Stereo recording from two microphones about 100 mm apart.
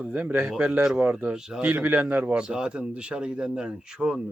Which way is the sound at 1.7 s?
20° right (ahead or behind).